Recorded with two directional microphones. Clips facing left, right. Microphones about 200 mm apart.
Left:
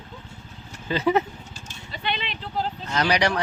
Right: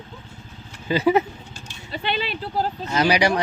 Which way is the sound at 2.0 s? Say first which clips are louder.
Right 4 dB; 40° right (ahead or behind).